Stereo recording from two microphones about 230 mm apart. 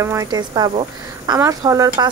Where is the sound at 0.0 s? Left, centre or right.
Centre.